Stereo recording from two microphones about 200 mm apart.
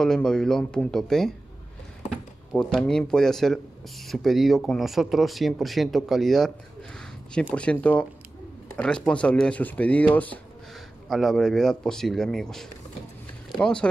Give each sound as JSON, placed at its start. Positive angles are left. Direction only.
{"t": 0.0, "sound": "speech", "side_deg": 5}
{"t": 2.5, "sound": "speech", "side_deg": 5}
{"t": 7.5, "sound": "speech", "side_deg": 5}